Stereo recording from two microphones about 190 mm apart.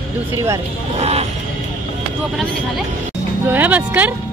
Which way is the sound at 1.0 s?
35° right (ahead or behind).